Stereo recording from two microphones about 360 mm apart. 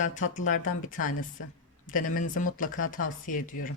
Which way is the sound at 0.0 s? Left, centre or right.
Left.